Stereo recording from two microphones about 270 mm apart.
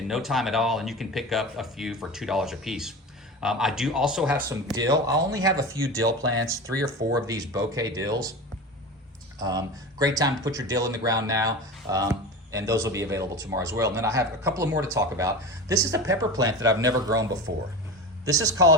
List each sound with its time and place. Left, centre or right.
0.1 s speech: centre
7.1 s speech: centre
9.4 s speech: centre
17.5 s speech: right
18.3 s speech: centre